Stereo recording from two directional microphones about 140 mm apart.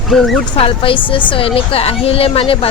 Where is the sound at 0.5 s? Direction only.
40° left (ahead or behind).